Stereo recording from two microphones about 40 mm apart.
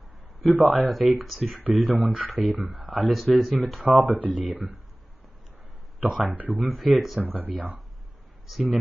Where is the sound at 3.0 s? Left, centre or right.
Centre.